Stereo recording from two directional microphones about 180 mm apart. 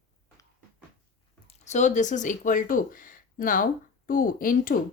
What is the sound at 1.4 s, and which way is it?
Speech, 40° left (ahead or behind).